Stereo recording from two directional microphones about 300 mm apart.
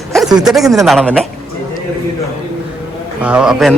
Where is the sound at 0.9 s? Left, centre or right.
Centre.